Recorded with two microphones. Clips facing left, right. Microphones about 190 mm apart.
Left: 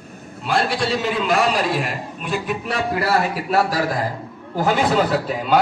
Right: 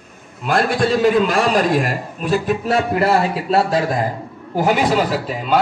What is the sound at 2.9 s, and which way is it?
A man's voice, 25° right (ahead or behind).